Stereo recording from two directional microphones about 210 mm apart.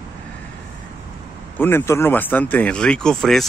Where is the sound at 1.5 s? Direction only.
10° left (ahead or behind).